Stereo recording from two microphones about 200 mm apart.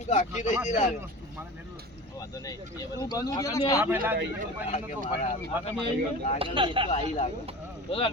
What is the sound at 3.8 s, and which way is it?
Speech, 10° right (ahead or behind).